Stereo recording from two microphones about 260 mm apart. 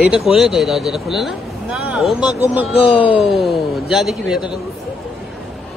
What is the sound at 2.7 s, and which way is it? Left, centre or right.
Speech, centre.